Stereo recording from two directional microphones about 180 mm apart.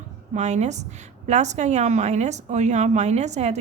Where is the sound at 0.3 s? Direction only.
40° right (ahead or behind).